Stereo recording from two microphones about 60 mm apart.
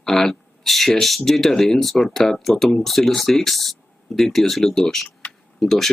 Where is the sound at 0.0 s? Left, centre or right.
Centre.